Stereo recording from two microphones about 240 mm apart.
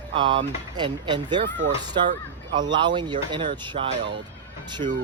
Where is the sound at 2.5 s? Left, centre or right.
Centre.